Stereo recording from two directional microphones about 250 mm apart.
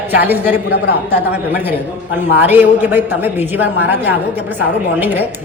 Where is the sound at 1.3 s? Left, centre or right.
Centre.